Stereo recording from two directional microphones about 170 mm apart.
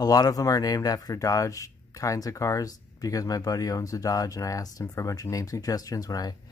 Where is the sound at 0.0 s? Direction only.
20° left (ahead or behind).